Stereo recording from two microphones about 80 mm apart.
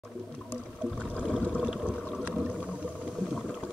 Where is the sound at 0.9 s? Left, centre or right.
Centre.